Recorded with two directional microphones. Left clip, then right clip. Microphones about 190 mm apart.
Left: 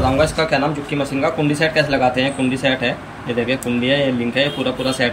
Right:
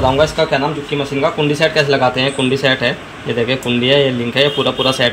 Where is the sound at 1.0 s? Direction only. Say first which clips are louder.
Right 3 dB; 15° right (ahead or behind).